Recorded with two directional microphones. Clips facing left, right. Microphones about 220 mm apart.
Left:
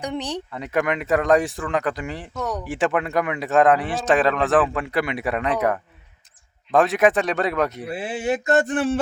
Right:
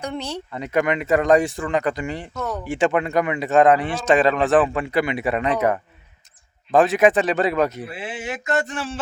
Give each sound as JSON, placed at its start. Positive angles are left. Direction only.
{"t": 0.0, "sound": "speech", "side_deg": 15}
{"t": 0.5, "sound": "speech", "side_deg": 0}
{"t": 7.9, "sound": "speech", "side_deg": 35}
{"t": 8.6, "sound": "a sound", "side_deg": 55}